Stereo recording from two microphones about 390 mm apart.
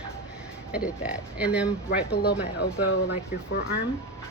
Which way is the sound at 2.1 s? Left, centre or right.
Left.